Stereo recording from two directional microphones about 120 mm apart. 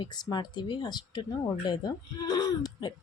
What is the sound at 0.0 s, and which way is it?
Speech, 40° left (ahead or behind).